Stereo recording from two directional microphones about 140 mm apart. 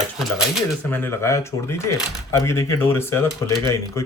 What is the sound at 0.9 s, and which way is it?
Speech, 15° left (ahead or behind).